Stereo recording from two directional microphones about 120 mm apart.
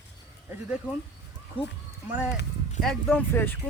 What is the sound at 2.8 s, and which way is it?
Speech, 5° left (ahead or behind).